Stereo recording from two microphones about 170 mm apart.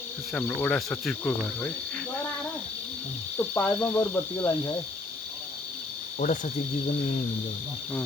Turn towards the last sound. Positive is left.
turn(degrees=50)  # may be behind; listen again after turning